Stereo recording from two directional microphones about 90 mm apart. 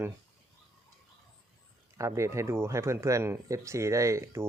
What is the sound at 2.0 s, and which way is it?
Speech, 35° right (ahead or behind).